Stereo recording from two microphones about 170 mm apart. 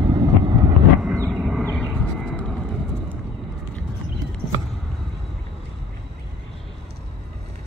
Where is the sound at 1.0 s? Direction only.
10° right (ahead or behind).